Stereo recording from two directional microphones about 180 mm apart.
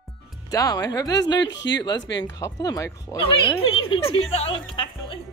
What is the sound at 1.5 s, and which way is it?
Speech, 75° left (ahead or behind).